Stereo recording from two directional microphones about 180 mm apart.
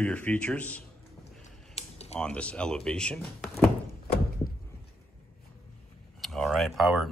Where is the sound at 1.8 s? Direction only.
35° left (ahead or behind).